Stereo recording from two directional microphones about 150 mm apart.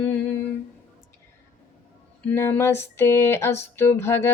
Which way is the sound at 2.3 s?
15° left (ahead or behind).